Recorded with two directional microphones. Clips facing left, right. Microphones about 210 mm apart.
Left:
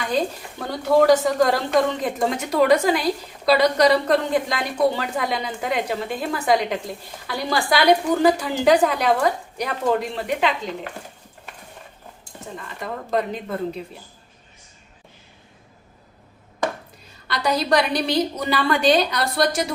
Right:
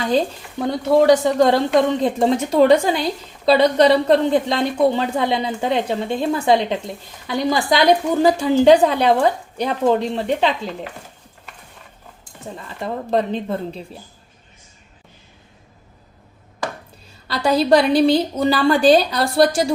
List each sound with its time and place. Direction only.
0.0 s a woman's voice: 30° right (ahead or behind)
12.8 s a woman's voice: 30° right (ahead or behind)
17.2 s a woman's voice: 30° right (ahead or behind)